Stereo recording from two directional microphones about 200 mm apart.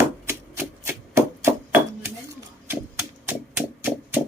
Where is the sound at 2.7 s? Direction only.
10° right (ahead or behind).